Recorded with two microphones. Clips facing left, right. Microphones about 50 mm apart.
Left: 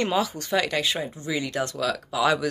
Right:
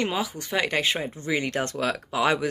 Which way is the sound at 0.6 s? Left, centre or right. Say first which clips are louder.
Right 2 dB; right.